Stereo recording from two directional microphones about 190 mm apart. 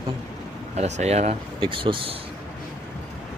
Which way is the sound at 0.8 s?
35° right (ahead or behind).